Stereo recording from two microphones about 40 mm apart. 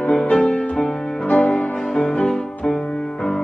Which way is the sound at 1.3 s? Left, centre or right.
Left.